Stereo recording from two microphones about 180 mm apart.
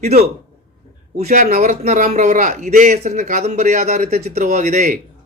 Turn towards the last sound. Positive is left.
turn(degrees=-40)  # may be behind; listen again after turning